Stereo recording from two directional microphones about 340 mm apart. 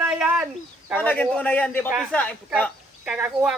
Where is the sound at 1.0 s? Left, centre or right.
Centre.